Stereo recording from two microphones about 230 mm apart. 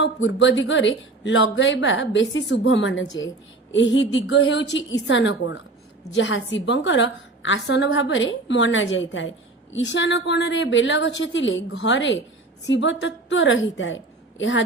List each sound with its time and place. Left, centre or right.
0.0 s a woman's voice: left